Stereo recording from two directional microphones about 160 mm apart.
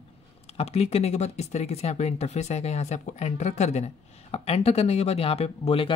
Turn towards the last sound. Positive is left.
turn(degrees=35)  # may be behind; listen again after turning